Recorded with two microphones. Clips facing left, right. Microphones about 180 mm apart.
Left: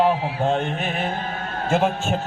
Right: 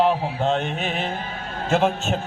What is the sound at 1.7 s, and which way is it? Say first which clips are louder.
Speech: right 1 dB; 10° left (ahead or behind).